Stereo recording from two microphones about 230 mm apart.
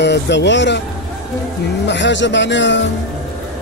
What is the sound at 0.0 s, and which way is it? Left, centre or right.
Speech, left.